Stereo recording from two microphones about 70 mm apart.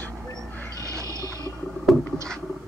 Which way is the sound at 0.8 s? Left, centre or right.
Right.